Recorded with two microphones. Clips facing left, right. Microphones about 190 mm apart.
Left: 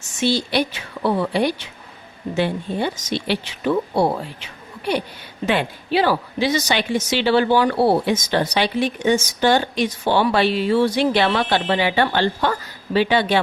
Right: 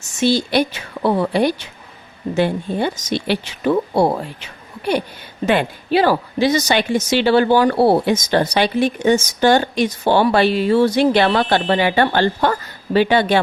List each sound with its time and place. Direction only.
0.2 s a woman's voice: 45° right (ahead or behind)
5.5 s a woman's voice: 45° right (ahead or behind)